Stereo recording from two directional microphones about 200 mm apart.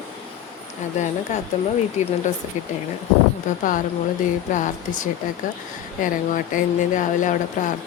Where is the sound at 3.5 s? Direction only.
40° left (ahead or behind).